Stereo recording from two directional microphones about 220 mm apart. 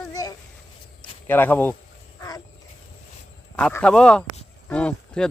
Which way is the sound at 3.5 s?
5° left (ahead or behind).